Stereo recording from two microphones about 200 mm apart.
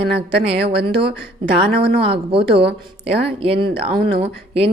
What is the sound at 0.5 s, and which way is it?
Speech, 55° right (ahead or behind).